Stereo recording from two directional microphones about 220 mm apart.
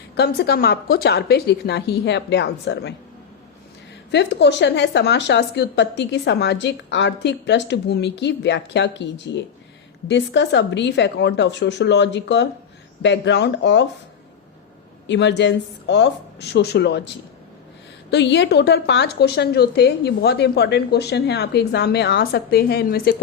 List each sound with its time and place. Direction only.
0.2 s a woman's voice: 45° left (ahead or behind)
4.1 s a woman's voice: 50° left (ahead or behind)
15.0 s a woman's voice: 55° left (ahead or behind)
18.1 s a woman's voice: 50° left (ahead or behind)